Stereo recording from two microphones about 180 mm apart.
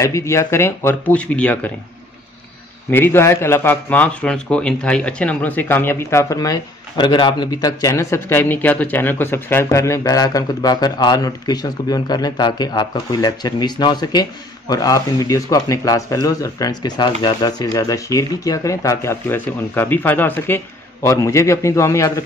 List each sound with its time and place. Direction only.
0.0 s a man's voice: 15° left (ahead or behind)
2.9 s a man's voice: 10° left (ahead or behind)